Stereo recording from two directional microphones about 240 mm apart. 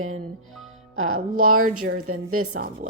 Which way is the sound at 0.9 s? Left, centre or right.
Right.